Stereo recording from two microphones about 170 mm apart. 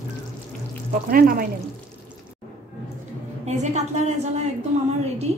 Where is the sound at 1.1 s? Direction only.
60° right (ahead or behind).